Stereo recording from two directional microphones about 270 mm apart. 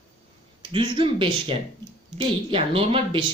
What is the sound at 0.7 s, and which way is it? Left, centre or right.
Speech, centre.